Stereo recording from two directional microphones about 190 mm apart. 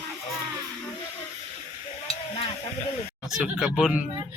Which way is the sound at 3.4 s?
Centre (ahead or behind).